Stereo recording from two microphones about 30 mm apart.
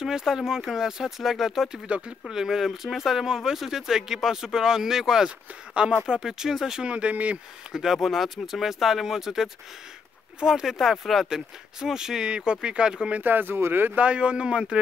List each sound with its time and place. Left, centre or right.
0.0 s speech: centre
1.9 s a man's voice: right
2.2 s speech: centre
6.9 s speech: right
7.7 s speech: centre
10.8 s speech: centre
11.2 s speech: centre
13.2 s speech: right
13.9 s a man's voice: right